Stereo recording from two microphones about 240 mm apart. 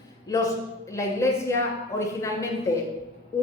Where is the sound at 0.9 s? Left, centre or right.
Centre.